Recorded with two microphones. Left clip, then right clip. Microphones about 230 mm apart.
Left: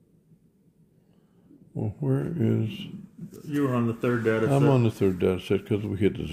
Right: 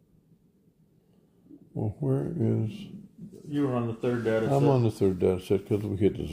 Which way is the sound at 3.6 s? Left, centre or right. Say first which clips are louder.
Left 2 dB; left.